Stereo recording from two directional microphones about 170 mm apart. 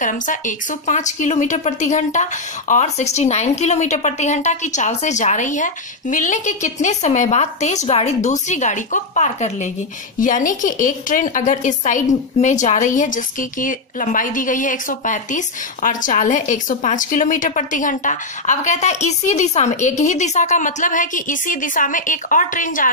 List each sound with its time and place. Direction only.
0.0 s a woman's voice: 50° left (ahead or behind)